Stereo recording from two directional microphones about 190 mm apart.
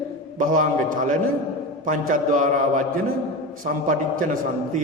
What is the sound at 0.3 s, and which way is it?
A man's voice, 45° right (ahead or behind).